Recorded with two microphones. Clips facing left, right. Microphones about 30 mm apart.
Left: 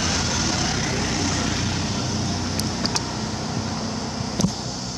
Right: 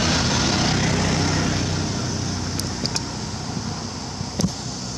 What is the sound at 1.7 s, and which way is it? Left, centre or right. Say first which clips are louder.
Vehicle: even; centre.